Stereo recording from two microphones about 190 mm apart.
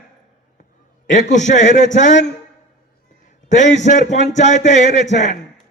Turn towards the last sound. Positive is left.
turn(degrees=40)  # may be behind; listen again after turning